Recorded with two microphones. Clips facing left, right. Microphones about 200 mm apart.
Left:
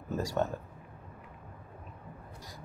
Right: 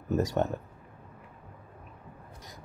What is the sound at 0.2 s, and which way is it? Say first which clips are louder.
Speech: right 2 dB; 20° right (ahead or behind).